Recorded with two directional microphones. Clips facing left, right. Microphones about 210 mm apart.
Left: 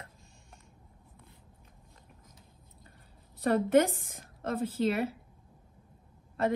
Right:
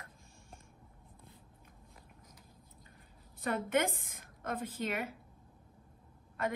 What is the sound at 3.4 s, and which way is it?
A woman's voice, 35° left (ahead or behind).